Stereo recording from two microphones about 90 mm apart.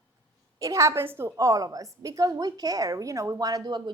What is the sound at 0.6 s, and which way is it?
A woman's voice, 35° right (ahead or behind).